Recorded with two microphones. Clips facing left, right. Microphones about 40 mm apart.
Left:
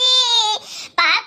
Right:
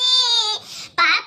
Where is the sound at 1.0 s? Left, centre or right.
Left.